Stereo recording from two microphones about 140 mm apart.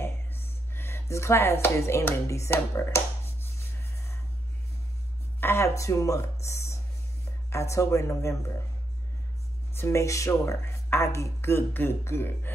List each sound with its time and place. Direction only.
0.0 s a sound: 15° left (ahead or behind)
5.4 s speech: 20° left (ahead or behind)
9.8 s speech: 20° left (ahead or behind)